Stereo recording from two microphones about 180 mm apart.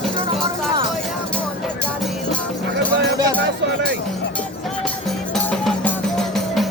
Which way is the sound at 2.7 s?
70° right (ahead or behind).